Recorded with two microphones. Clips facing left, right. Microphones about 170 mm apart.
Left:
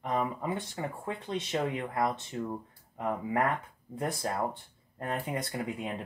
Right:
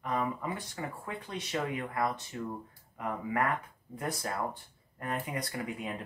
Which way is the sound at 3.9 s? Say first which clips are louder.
Left 3 dB; 25° left (ahead or behind).